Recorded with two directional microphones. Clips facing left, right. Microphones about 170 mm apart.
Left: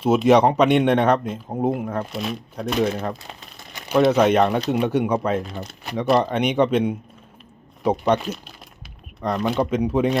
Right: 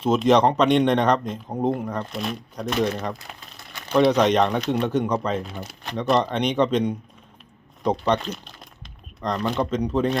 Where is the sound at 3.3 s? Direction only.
30° left (ahead or behind).